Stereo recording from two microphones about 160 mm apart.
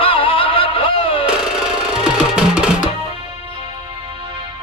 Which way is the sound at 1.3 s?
5° right (ahead or behind).